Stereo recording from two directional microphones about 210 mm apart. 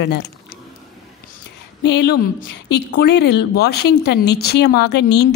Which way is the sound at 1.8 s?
55° left (ahead or behind).